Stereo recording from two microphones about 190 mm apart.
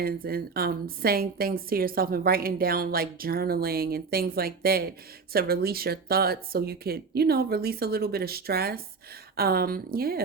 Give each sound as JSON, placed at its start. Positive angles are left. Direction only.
{"t": 0.0, "sound": "a woman's voice", "side_deg": -50}